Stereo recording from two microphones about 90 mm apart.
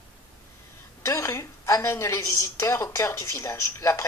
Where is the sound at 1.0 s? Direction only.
35° left (ahead or behind).